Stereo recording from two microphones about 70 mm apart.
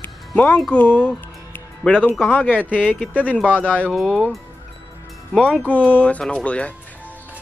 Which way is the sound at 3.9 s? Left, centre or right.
Centre.